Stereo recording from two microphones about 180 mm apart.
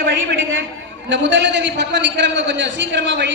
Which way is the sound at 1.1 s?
80° right.